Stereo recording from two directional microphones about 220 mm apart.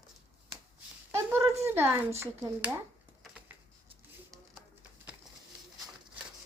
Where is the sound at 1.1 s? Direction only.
10° right (ahead or behind).